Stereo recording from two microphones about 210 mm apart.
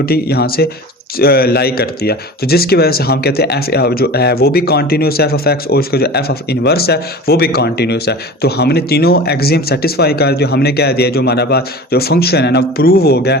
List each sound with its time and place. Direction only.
0.0 s speech: 50° left (ahead or behind)